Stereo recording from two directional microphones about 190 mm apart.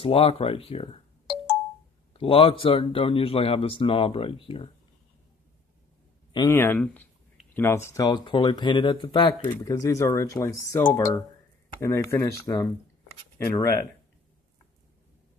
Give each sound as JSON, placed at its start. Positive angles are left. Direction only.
{"t": 0.0, "sound": "speech", "side_deg": 30}
{"t": 2.1, "sound": "speech", "side_deg": 30}
{"t": 6.3, "sound": "speech", "side_deg": 15}